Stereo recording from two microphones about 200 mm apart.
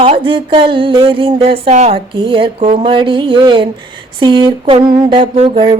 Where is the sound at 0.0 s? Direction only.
25° right (ahead or behind).